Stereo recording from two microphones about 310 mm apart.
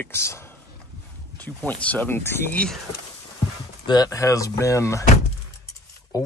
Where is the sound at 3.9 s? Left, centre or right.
Centre.